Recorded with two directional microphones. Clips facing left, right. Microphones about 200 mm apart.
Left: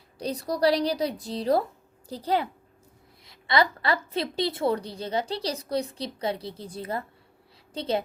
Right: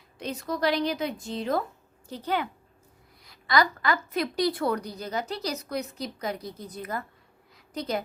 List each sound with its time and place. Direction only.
0.2 s a woman's voice: 35° left (ahead or behind)